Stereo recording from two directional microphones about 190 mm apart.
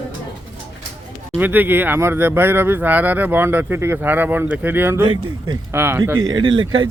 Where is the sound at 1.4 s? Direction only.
10° right (ahead or behind).